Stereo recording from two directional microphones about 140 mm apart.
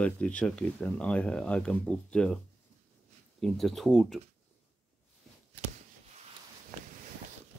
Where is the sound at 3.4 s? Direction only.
Centre (ahead or behind).